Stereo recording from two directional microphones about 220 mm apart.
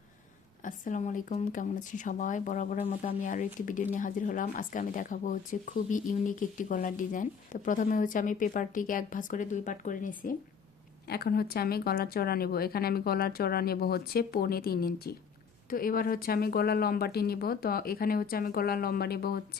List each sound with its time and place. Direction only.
0.6 s a woman's voice: 35° left (ahead or behind)